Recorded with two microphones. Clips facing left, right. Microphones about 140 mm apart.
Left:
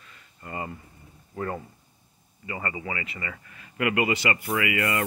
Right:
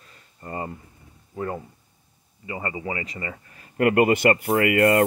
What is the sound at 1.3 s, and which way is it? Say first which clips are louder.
Speech: right 2 dB; 15° right (ahead or behind).